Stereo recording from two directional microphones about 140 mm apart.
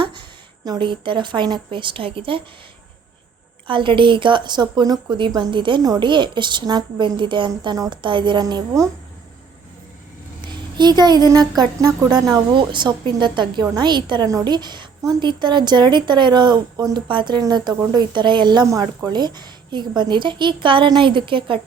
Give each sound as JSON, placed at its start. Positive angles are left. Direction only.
{"t": 0.0, "sound": "speech", "side_deg": -35}
{"t": 3.7, "sound": "a woman's voice", "side_deg": -35}
{"t": 10.8, "sound": "a woman's voice", "side_deg": -30}